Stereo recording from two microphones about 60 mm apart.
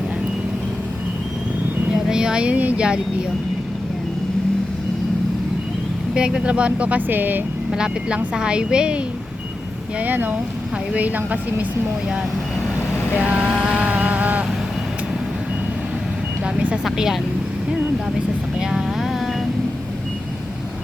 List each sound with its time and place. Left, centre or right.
2.0 s speech: centre
6.1 s speech: centre; by 7.4 s right
7.7 s a woman's voice: centre
10.0 s speech: right
13.1 s speech: centre
13.5 s a woman's voice: centre
13.7 s a sound: centre
16.6 s vehicle: centre
16.8 s speech: centre
18.6 s vehicle: centre